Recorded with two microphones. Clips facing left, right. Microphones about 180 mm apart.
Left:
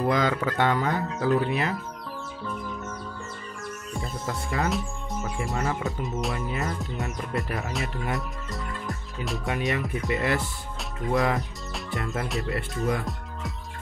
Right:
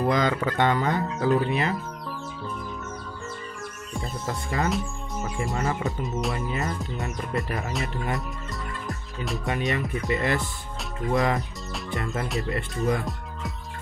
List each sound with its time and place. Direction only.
0.1 s speech: 5° left (ahead or behind)
4.0 s speech: centre (ahead or behind)